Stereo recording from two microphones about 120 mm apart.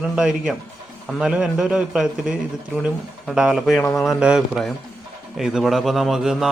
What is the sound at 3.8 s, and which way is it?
Speech, 25° left (ahead or behind).